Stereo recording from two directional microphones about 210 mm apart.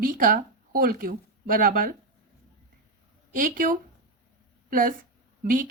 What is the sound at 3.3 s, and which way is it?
A woman's voice, 40° right (ahead or behind).